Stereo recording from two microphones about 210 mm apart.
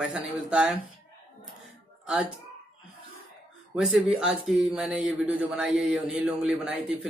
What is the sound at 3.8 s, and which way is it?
A man's voice, 5° right (ahead or behind).